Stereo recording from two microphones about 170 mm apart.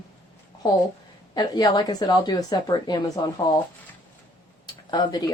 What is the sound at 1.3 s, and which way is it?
A woman's voice, 25° left (ahead or behind).